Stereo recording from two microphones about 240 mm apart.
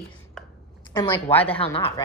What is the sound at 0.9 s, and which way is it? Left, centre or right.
Speech, centre.